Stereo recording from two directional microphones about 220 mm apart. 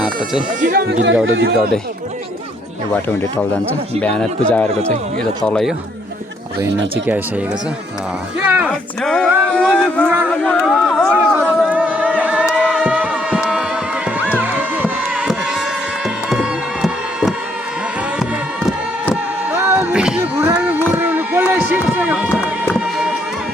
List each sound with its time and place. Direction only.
0.6 s speech: 45° right (ahead or behind)
2.9 s speech: 10° left (ahead or behind)
8.4 s speech: 5° right (ahead or behind)
11.3 s a sound: 10° right (ahead or behind)
16.0 s music: centre (ahead or behind)